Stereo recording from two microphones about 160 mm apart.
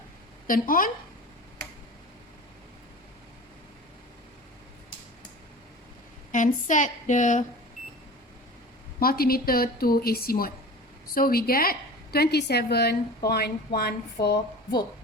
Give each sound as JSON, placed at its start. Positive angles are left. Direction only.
{"t": 0.4, "sound": "a woman's voice", "side_deg": 60}
{"t": 6.3, "sound": "speech", "side_deg": 55}
{"t": 9.0, "sound": "a woman's voice", "side_deg": 70}